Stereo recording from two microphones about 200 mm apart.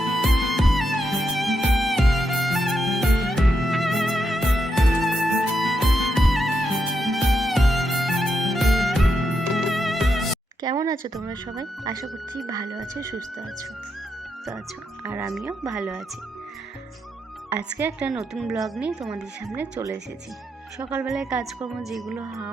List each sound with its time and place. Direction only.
0.0 s music: centre (ahead or behind)
10.6 s speech: 20° right (ahead or behind)
15.0 s speech: 5° right (ahead or behind)
17.5 s speech: 5° right (ahead or behind)